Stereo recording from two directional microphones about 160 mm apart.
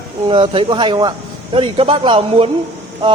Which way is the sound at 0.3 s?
35° right (ahead or behind).